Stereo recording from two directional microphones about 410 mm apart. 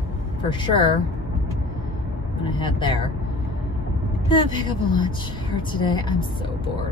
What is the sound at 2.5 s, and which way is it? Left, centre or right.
Speech, centre.